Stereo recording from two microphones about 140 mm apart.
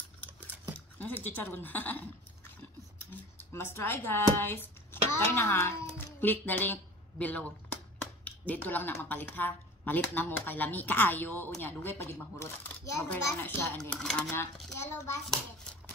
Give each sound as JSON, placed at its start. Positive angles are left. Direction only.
{"t": 0.9, "sound": "a child's voice", "side_deg": 15}
{"t": 3.1, "sound": "a child's voice", "side_deg": 15}
{"t": 13.7, "sound": "speech", "side_deg": 5}
{"t": 14.3, "sound": "a child's voice", "side_deg": 20}